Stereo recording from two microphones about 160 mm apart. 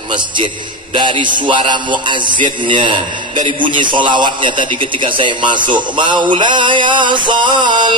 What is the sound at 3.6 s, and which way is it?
Mantra, 30° right (ahead or behind).